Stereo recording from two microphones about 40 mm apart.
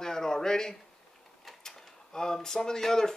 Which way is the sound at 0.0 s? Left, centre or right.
Centre.